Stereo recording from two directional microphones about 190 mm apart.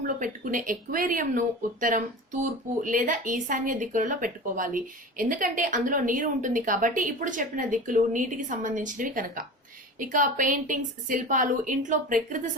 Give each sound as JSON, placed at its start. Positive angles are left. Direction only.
{"t": 0.2, "sound": "speech", "side_deg": -45}